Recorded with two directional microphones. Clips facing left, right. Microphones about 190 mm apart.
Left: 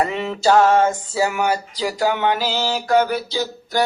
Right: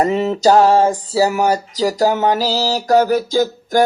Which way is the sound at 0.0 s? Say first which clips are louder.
Right 5 dB; 40° right (ahead or behind).